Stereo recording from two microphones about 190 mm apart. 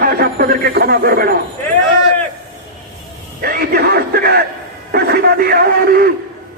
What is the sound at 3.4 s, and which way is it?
A man's voice, 55° right (ahead or behind).